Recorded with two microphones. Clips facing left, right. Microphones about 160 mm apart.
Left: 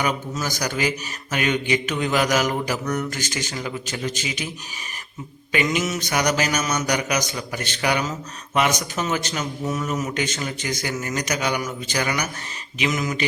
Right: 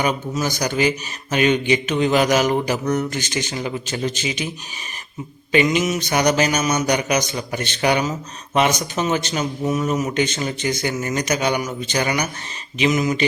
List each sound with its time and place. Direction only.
0.0 s a man's voice: 25° right (ahead or behind)
5.5 s mantra: 25° right (ahead or behind)
6.0 s a man's voice: 25° right (ahead or behind)